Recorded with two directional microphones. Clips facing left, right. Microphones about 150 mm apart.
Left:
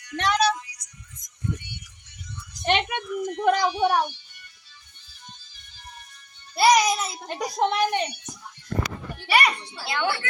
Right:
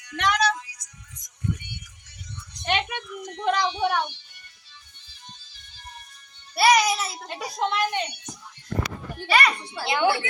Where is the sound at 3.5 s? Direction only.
40° left (ahead or behind).